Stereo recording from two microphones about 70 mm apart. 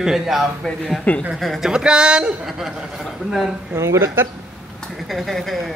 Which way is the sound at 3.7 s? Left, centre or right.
Right.